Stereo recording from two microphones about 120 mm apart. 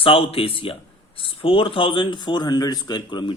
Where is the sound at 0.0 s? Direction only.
50° left (ahead or behind).